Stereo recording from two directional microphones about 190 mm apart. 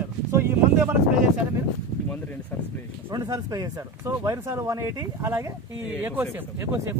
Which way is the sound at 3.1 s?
20° right (ahead or behind).